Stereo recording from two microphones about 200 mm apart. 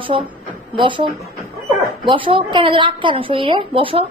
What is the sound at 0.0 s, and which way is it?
A woman's voice, 25° right (ahead or behind).